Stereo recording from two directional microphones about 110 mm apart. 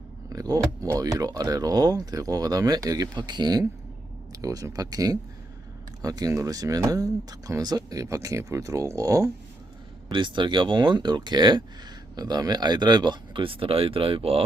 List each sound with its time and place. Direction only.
0.3 s speech: 35° right (ahead or behind)
10.1 s speech: 45° right (ahead or behind)